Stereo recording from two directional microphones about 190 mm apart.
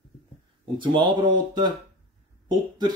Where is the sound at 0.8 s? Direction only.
25° right (ahead or behind).